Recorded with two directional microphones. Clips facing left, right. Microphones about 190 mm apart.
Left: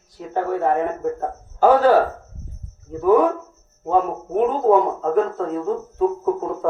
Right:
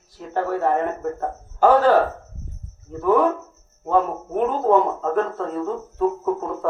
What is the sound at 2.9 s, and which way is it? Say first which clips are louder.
A man's voice: left 2 dB; 5° left (ahead or behind).